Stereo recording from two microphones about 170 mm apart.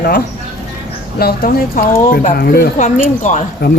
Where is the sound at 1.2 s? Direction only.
65° left (ahead or behind).